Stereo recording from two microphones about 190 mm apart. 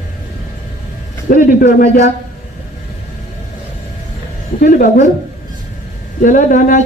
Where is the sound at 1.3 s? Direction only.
50° left (ahead or behind).